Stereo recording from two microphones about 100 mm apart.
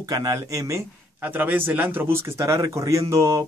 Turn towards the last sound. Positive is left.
turn(degrees=-30)  # may be behind; listen again after turning